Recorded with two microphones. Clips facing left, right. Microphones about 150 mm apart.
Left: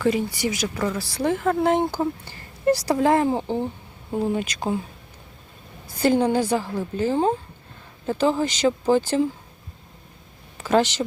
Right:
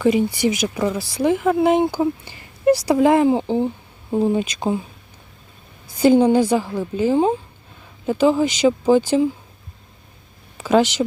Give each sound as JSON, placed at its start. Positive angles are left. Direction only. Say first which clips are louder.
{"t": 0.0, "sound": "speech", "louder": "right 5 dB", "side_deg": -20}
{"t": 6.0, "sound": "speech", "louder": "right 6 dB", "side_deg": -15}
{"t": 10.6, "sound": "speech", "louder": "right 3 dB", "side_deg": -15}